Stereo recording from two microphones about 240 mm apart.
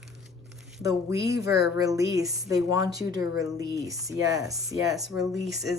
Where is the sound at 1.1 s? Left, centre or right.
Centre.